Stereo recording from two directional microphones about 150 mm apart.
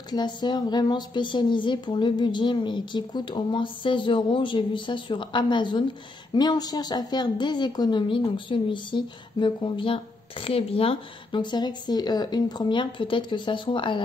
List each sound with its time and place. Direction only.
0.1 s a woman's voice: 30° left (ahead or behind)